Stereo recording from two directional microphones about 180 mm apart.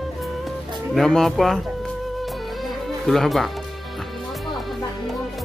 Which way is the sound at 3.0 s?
Centre (ahead or behind).